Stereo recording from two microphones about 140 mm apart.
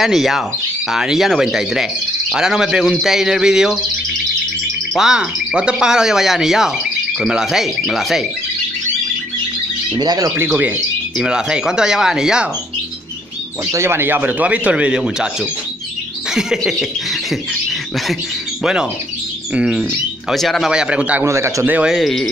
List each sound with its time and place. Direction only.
0.0 s speech: centre (ahead or behind)
4.9 s speech: 5° right (ahead or behind)
9.9 s speech: 30° right (ahead or behind)
11.1 s speech: 5° right (ahead or behind)
13.7 s speech: 20° right (ahead or behind)
16.3 s speech: 5° right (ahead or behind); by 21.7 s 20° right (ahead or behind)
21.7 s speech: 5° right (ahead or behind)